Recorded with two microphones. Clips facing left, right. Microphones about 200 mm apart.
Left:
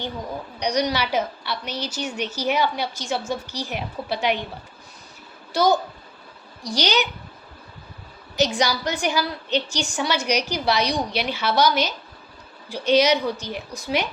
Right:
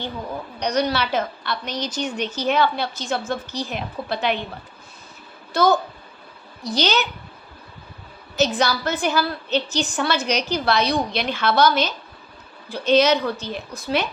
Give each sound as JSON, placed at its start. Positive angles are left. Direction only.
{"t": 0.6, "sound": "a woman's voice", "side_deg": 10}
{"t": 5.5, "sound": "a woman's voice", "side_deg": 10}
{"t": 8.4, "sound": "a woman's voice", "side_deg": 15}